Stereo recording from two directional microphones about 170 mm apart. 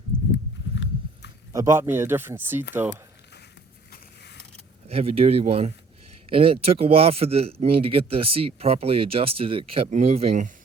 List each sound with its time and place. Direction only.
0.1 s walk: 35° right (ahead or behind)
0.7 s horse: 90° left
1.5 s speech: 20° right (ahead or behind)
4.9 s speech: 35° right (ahead or behind)